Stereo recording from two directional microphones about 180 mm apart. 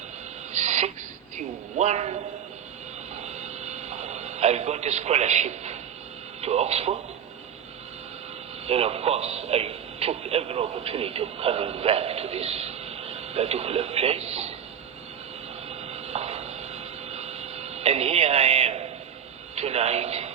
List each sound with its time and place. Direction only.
0.5 s a sound: 40° right (ahead or behind)
1.4 s speech: 40° right (ahead or behind)
3.2 s radio: 40° right (ahead or behind)
6.4 s speech: 35° right (ahead or behind)
8.6 s speech: 35° right (ahead or behind)
15.9 s a sound: 35° right (ahead or behind)
19.5 s a man's voice: 35° right (ahead or behind)